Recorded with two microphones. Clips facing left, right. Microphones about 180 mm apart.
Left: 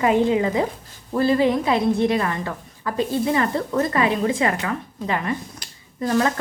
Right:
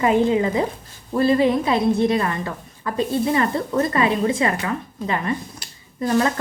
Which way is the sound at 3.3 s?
25° right (ahead or behind).